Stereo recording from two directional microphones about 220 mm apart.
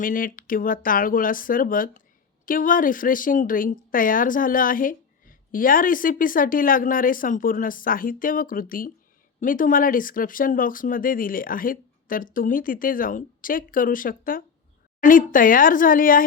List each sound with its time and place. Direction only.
0.0 s a woman's voice: 40° left (ahead or behind)